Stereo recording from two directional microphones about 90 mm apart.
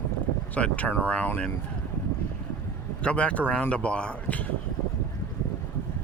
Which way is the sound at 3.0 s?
15° left (ahead or behind).